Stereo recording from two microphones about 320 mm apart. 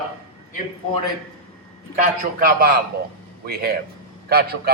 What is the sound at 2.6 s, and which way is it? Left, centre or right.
A man's voice, right.